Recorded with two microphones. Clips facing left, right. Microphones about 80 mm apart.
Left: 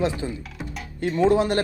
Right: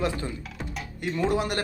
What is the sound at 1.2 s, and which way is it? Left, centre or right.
Speech, left.